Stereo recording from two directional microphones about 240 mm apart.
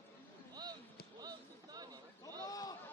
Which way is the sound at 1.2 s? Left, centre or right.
Centre.